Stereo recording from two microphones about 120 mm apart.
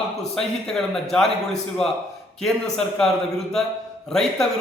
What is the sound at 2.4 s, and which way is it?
A man's voice, 5° left (ahead or behind).